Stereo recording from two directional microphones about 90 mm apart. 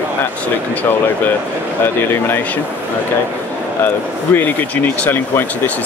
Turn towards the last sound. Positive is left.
turn(degrees=20)  # may be behind; listen again after turning